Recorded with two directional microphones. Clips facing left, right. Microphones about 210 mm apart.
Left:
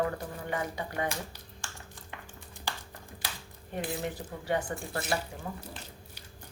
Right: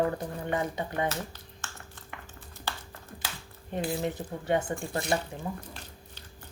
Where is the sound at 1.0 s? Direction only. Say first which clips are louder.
Right 3 dB; 15° left (ahead or behind).